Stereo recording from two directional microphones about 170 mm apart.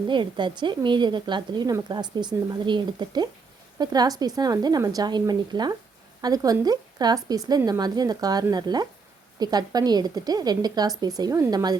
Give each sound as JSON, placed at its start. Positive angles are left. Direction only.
{"t": 0.1, "sound": "a woman's voice", "side_deg": -30}